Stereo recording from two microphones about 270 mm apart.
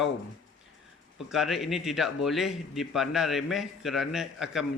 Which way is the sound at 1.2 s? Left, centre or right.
Centre.